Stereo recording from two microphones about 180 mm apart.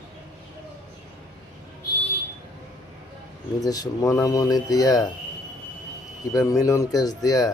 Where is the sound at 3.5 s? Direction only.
20° left (ahead or behind).